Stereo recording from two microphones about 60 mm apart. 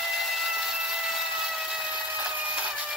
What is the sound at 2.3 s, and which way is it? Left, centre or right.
Printer, centre.